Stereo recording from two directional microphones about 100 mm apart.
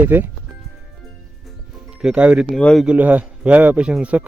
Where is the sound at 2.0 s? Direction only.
10° right (ahead or behind).